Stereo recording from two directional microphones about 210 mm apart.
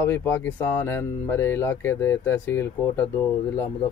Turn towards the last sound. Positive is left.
turn(degrees=10)  # may be behind; listen again after turning